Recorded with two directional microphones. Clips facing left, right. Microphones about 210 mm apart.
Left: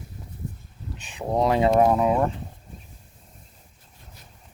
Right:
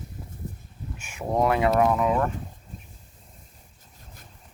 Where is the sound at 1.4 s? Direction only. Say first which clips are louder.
Left 2 dB; 25° left (ahead or behind).